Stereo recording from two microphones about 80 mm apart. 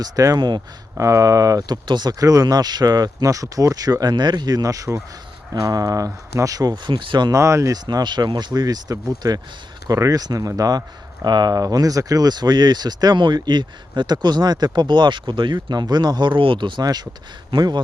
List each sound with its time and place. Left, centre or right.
0.0 s speech: right
0.9 s speech: right
6.8 s speech: right
7.3 s speech: right
7.9 s speech: right
16.8 s speech: right